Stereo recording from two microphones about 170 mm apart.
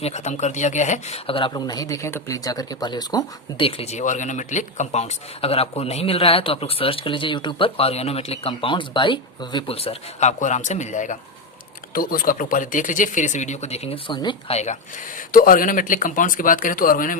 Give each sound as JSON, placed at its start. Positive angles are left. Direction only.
{"t": 0.0, "sound": "speech", "side_deg": 40}
{"t": 3.7, "sound": "speech", "side_deg": 35}
{"t": 11.9, "sound": "speech", "side_deg": 55}
{"t": 15.3, "sound": "speech", "side_deg": 55}